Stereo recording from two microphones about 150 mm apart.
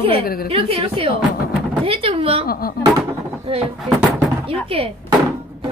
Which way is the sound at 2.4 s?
85° left.